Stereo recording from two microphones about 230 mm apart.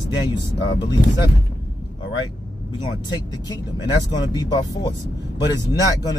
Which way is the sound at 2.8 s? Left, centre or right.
Centre.